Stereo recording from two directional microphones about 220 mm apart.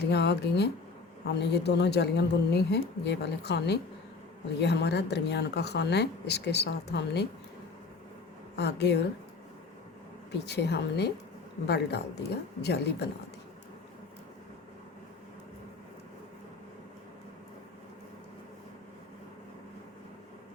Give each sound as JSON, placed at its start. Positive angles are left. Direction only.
{"t": 0.0, "sound": "speech", "side_deg": 50}
{"t": 8.5, "sound": "speech", "side_deg": 50}
{"t": 10.3, "sound": "speech", "side_deg": 50}